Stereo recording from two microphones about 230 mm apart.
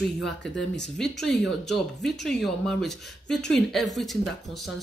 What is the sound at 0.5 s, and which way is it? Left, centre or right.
Speech, left.